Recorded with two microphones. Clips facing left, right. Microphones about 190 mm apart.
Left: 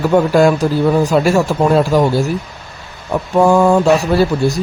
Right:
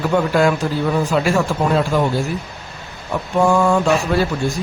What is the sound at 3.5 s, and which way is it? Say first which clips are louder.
Speech: left 5 dB; 40° left (ahead or behind).